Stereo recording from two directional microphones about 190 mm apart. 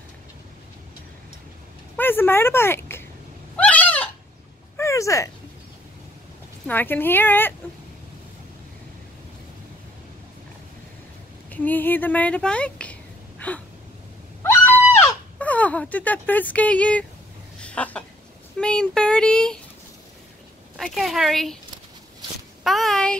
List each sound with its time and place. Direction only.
2.0 s speech: 10° left (ahead or behind)
3.5 s fowl: 10° left (ahead or behind)
4.7 s a sound: 15° left (ahead or behind)
6.7 s a woman's voice: 10° left (ahead or behind)
11.5 s a woman's voice: 10° left (ahead or behind)
13.4 s a sound: 10° left (ahead or behind)
18.6 s speech: 5° left (ahead or behind)
20.7 s speech: centre (ahead or behind)
22.6 s speech: centre (ahead or behind)